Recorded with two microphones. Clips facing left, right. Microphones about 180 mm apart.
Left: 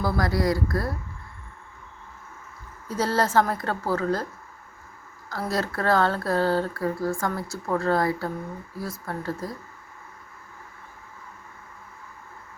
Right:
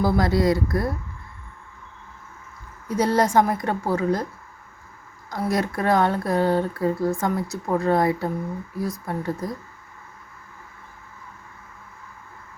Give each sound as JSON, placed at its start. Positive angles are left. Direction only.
{"t": 0.0, "sound": "speech", "side_deg": -25}
{"t": 2.9, "sound": "speech", "side_deg": -15}
{"t": 5.3, "sound": "speech", "side_deg": -15}